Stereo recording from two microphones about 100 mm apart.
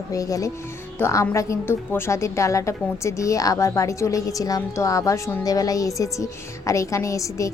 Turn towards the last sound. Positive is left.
turn(degrees=30)  # may be behind; listen again after turning